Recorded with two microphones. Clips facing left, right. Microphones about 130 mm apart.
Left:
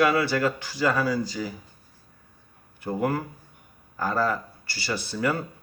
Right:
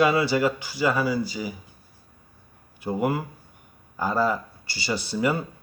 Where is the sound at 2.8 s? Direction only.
10° right (ahead or behind).